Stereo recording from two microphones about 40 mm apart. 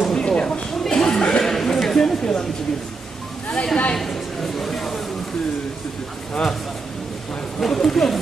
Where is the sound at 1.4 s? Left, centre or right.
Centre.